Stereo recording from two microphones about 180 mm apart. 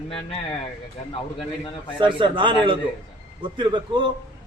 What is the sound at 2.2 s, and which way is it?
A man's voice, 25° right (ahead or behind).